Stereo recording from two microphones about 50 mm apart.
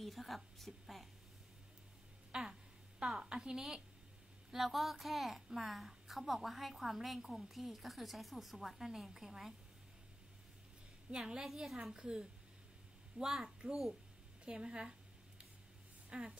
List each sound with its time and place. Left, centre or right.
0.0 s a woman's voice: centre
2.3 s a sound: centre
4.5 s a woman's voice: centre
11.1 s a woman's voice: centre
14.4 s a sound: centre
16.1 s speech: centre